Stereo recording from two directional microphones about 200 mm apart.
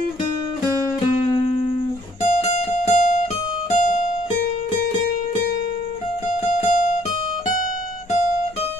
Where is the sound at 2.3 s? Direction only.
35° left (ahead or behind).